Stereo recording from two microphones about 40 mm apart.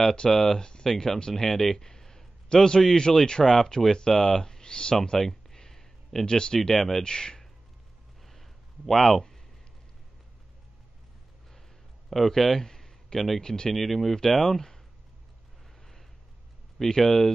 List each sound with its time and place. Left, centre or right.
0.0 s a man's voice: centre
5.2 s a sound: centre
6.7 s speech: centre
7.0 s speech: centre
8.2 s a sound: centre
12.1 s speech: centre
13.7 s speech: centre
16.7 s speech: centre